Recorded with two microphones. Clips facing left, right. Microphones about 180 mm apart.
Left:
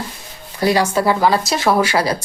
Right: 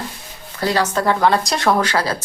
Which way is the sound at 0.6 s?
10° left (ahead or behind).